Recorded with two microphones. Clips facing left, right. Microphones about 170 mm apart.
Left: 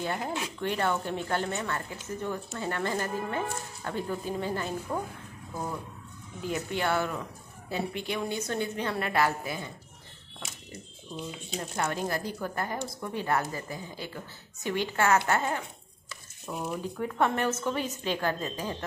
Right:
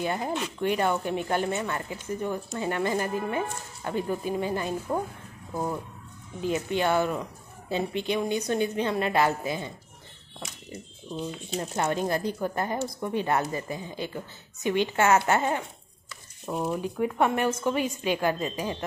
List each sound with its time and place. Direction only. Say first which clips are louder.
0.0 s a woman's voice: right 3 dB; 15° right (ahead or behind)
11.7 s a woman's voice: right 4 dB; 25° right (ahead or behind)
16.4 s speech: right 5 dB; 35° right (ahead or behind)
16.8 s speech: right 1 dB; 15° right (ahead or behind)